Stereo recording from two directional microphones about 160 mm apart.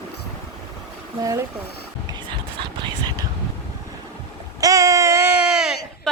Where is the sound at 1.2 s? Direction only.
20° right (ahead or behind).